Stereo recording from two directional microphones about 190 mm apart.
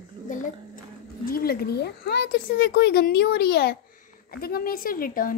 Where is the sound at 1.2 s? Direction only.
50° left (ahead or behind).